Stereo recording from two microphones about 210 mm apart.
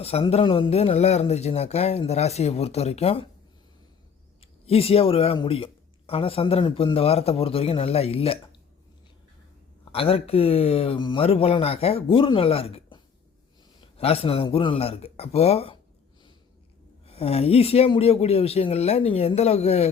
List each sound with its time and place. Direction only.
0.0 s speech: 30° left (ahead or behind)
4.4 s speech: 30° left (ahead or behind)
9.9 s speech: 25° left (ahead or behind)
17.1 s speech: 30° left (ahead or behind)